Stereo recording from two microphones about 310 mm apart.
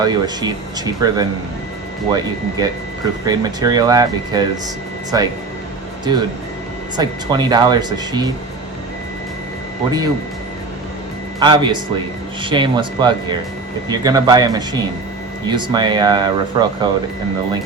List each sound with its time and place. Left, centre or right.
0.0 s speech: centre
6.9 s speech: centre
11.3 s speech: centre